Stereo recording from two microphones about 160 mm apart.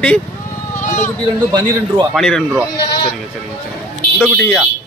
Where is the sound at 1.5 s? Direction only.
25° right (ahead or behind).